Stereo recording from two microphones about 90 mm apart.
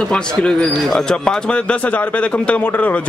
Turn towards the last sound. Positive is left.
turn(degrees=15)  # may be behind; listen again after turning